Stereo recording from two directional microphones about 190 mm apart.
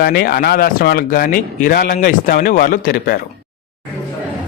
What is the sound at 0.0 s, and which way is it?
Speech, 55° left (ahead or behind).